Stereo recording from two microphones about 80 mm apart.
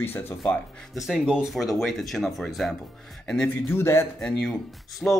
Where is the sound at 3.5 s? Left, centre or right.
Left.